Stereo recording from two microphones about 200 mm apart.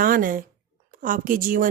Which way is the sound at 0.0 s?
45° right (ahead or behind).